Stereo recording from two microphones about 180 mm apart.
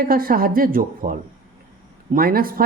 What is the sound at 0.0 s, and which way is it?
Speech, 55° right (ahead or behind).